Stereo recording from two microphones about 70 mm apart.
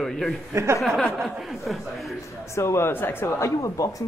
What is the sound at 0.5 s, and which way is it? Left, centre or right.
Speech, right.